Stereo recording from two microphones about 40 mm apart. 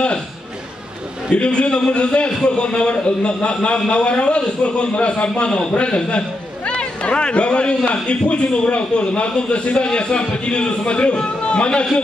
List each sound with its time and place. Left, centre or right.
1.3 s a man's voice: left